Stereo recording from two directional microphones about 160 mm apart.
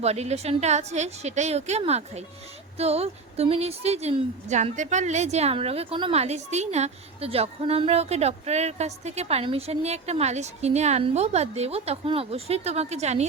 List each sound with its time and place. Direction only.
0.0 s a woman's voice: 40° right (ahead or behind)